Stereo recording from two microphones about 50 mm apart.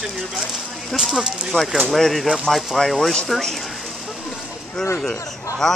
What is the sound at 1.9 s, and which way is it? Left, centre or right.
Speech, centre.